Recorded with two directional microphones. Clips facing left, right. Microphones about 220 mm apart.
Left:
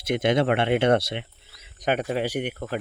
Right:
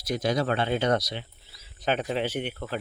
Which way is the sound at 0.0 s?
25° left (ahead or behind).